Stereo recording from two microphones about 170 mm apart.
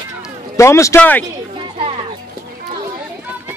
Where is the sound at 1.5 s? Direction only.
30° right (ahead or behind).